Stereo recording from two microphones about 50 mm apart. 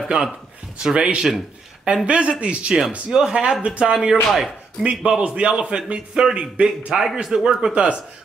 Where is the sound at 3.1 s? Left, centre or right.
Centre.